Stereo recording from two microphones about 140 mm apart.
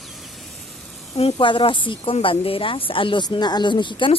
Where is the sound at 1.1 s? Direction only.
40° left (ahead or behind).